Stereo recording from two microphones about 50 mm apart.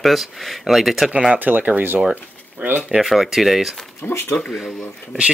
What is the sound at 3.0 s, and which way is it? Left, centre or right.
Speech, centre.